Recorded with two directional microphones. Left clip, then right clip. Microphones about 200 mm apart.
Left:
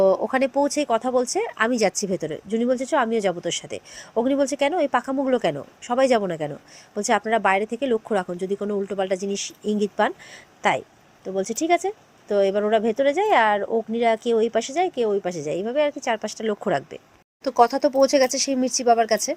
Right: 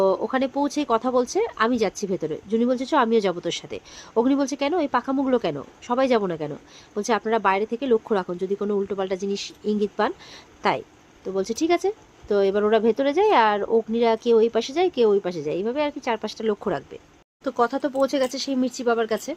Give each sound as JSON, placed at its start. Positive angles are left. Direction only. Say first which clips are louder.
{"t": 0.0, "sound": "speech", "louder": "left 2 dB", "side_deg": 10}
{"t": 17.4, "sound": "speech", "louder": "left 5 dB", "side_deg": 20}